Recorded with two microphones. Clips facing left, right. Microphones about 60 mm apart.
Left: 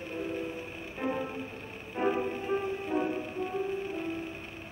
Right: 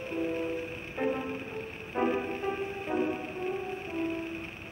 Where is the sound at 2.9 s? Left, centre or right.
Right.